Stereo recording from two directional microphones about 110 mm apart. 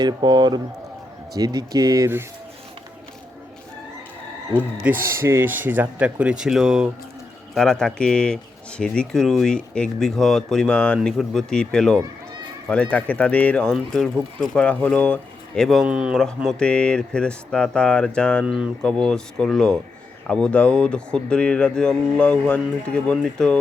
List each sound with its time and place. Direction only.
0.0 s speech: 40° right (ahead or behind)
4.8 s speech: 20° right (ahead or behind)
7.5 s speech: 5° left (ahead or behind)
15.9 s speech: 10° right (ahead or behind)
16.1 s speech: 5° left (ahead or behind)
18.4 s speech: 10° right (ahead or behind)
18.8 s speech: 5° left (ahead or behind)